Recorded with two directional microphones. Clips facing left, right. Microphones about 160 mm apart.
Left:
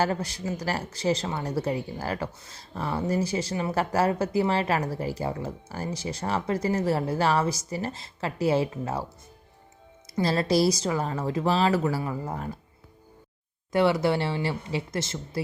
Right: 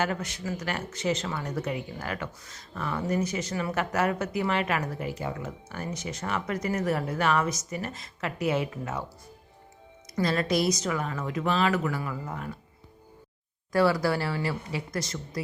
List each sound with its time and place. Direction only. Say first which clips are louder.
0.0 s speech: left 3 dB; 35° left (ahead or behind)
13.7 s speech: left 1 dB; 25° left (ahead or behind)